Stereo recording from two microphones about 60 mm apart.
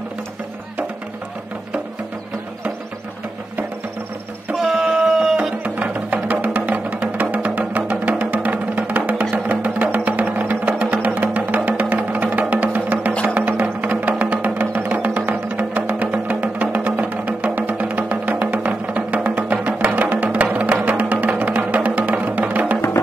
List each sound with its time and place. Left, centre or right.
4.6 s music: centre; by 22.8 s right